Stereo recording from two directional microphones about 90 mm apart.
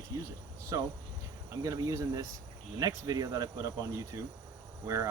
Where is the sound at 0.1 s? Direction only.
40° right (ahead or behind).